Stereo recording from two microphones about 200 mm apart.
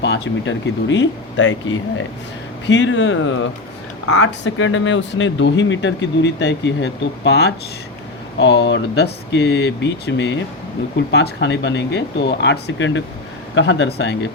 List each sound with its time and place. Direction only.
0.0 s speech: 65° left (ahead or behind)
2.6 s speech: 65° left (ahead or behind)